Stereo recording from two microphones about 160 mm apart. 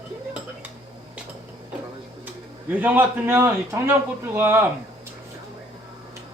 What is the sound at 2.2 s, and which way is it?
A man's voice, 10° right (ahead or behind).